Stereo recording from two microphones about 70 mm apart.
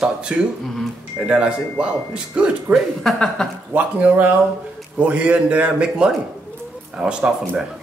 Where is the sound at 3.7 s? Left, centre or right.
Right.